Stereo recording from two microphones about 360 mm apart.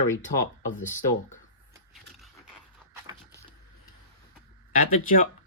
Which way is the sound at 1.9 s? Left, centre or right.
Centre.